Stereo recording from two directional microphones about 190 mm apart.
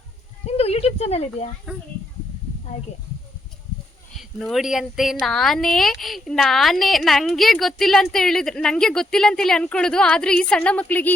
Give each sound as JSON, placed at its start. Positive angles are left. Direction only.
{"t": 0.4, "sound": "a sound", "side_deg": 30}
{"t": 1.7, "sound": "a woman's voice", "side_deg": -5}
{"t": 4.2, "sound": "a woman's voice", "side_deg": 0}